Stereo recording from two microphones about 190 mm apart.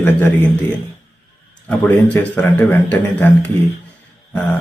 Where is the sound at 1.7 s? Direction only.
10° left (ahead or behind).